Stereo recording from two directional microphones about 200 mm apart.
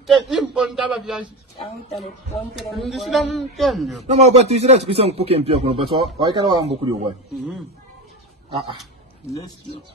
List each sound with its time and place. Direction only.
0.0 s a man's voice: centre (ahead or behind)
1.6 s speech: 30° left (ahead or behind)
2.3 s a man's voice: centre (ahead or behind)
4.0 s speech: 35° right (ahead or behind)
9.3 s speech: 20° left (ahead or behind)